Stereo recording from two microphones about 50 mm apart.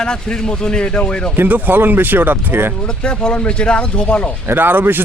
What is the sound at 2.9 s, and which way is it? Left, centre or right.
Speech, centre.